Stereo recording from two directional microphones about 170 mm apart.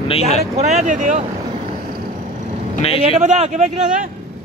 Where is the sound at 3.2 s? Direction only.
45° right (ahead or behind).